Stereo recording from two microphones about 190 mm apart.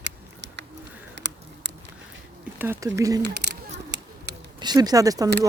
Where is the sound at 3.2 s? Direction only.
60° right (ahead or behind).